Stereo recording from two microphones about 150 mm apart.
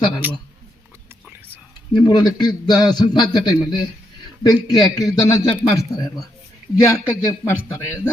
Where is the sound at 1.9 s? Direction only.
30° left (ahead or behind).